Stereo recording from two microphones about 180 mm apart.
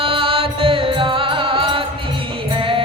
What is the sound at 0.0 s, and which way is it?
Music, 30° right (ahead or behind).